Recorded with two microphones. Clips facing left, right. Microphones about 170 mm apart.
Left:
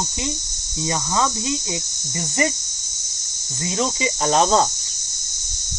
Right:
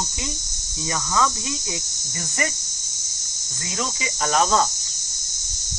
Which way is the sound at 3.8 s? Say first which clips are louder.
Left 5 dB; 25° left (ahead or behind).